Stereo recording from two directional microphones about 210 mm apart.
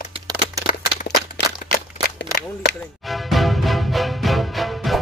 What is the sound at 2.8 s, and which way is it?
Music, centre (ahead or behind).